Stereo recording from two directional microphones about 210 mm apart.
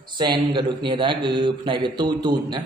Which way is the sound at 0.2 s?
20° right (ahead or behind).